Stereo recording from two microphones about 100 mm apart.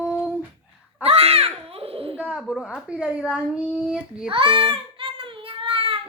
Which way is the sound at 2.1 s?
5° right (ahead or behind).